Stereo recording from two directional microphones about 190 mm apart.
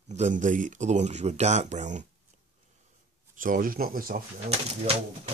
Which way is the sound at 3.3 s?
45° right (ahead or behind).